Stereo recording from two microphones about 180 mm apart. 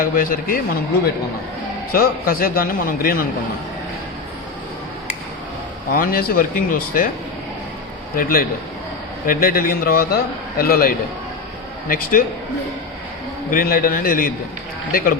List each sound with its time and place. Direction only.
0.0 s a man's voice: 50° left (ahead or behind)
1.9 s a man's voice: 55° left (ahead or behind)
5.9 s a man's voice: 50° left (ahead or behind)
8.1 s a man's voice: 55° left (ahead or behind)
13.5 s a man's voice: 55° left (ahead or behind)